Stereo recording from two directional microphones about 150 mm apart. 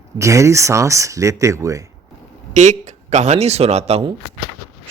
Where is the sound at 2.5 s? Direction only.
50° right (ahead or behind).